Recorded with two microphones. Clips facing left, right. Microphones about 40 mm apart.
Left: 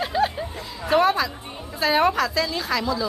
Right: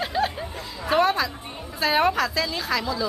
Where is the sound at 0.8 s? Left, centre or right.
Centre.